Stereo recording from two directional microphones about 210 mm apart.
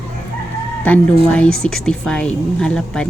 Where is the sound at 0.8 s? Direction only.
5° left (ahead or behind).